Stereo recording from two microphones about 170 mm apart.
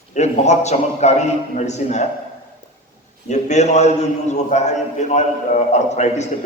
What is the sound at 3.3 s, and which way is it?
A man's voice, 40° left (ahead or behind).